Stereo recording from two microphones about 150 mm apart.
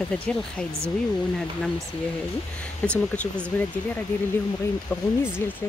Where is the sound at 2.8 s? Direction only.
10° left (ahead or behind).